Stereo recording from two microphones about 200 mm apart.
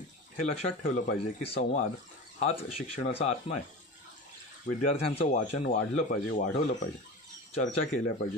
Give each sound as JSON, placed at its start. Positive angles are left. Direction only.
{"t": 0.5, "sound": "speech", "side_deg": 35}
{"t": 4.9, "sound": "speech", "side_deg": 30}